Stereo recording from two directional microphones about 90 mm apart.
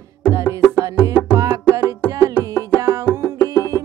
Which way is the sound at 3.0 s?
30° left (ahead or behind).